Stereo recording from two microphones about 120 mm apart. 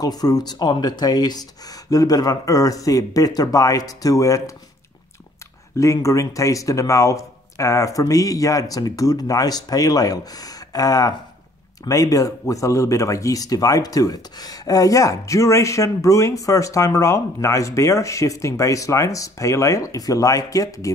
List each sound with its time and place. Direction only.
0.0 s speech: 35° left (ahead or behind)
5.8 s speech: 25° left (ahead or behind)